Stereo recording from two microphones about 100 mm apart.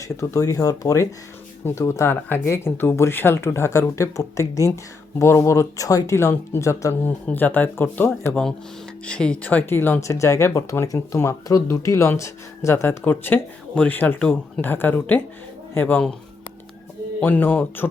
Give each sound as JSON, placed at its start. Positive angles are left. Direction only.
{"t": 0.0, "sound": "speech", "side_deg": 35}
{"t": 7.3, "sound": "speech", "side_deg": 15}
{"t": 9.0, "sound": "speech", "side_deg": 10}
{"t": 17.2, "sound": "speech", "side_deg": 15}